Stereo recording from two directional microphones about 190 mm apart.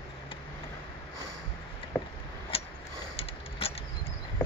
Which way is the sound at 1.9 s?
10° left (ahead or behind).